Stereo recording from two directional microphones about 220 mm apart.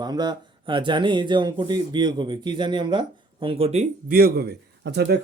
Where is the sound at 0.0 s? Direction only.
20° right (ahead or behind).